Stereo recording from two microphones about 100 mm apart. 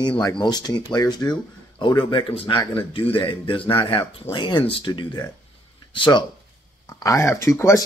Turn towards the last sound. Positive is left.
turn(degrees=30)  # may be behind; listen again after turning